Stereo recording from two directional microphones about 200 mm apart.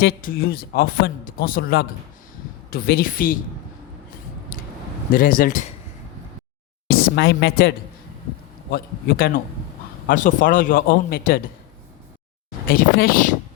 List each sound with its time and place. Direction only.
0.0 s speech: 45° left (ahead or behind)
5.1 s speech: 45° left (ahead or behind)
6.8 s speech: 50° left (ahead or behind)
8.7 s speech: 50° left (ahead or behind)
12.7 s speech: 45° left (ahead or behind)